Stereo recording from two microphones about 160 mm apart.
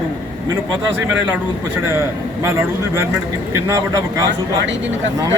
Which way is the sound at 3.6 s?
20° right (ahead or behind).